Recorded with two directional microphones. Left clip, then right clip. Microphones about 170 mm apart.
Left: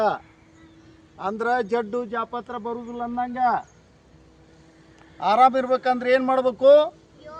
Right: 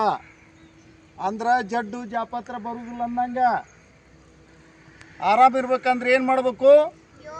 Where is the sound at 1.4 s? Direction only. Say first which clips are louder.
Right 1 dB; 65° right (ahead or behind).